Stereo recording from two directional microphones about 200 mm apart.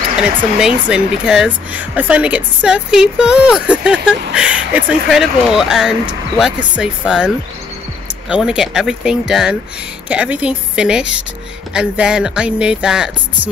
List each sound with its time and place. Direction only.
0.4 s speech: 5° right (ahead or behind)